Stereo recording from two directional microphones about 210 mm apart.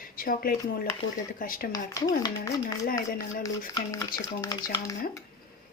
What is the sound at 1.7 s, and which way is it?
Speech, 15° left (ahead or behind).